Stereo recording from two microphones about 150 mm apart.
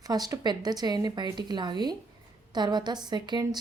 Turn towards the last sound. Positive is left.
turn(degrees=-30)  # may be behind; listen again after turning